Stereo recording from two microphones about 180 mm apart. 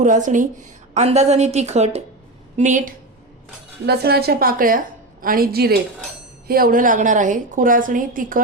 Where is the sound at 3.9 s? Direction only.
60° right (ahead or behind).